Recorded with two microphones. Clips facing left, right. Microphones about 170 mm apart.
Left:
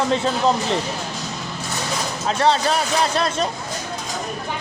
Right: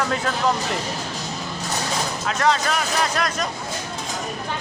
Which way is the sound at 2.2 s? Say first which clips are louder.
Left 3 dB; 30° left (ahead or behind).